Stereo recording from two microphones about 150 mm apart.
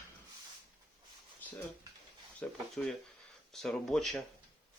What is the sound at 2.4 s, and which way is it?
Speech, 5° left (ahead or behind).